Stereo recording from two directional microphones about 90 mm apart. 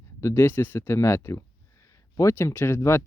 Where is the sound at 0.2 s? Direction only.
35° left (ahead or behind).